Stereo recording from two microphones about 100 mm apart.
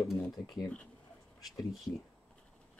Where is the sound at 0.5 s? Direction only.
5° left (ahead or behind).